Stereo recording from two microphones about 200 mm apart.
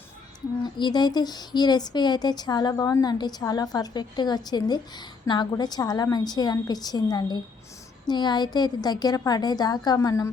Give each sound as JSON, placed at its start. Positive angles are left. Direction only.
{"t": 0.6, "sound": "speech", "side_deg": 20}